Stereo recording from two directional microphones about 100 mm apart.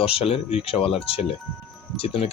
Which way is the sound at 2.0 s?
75° left (ahead or behind).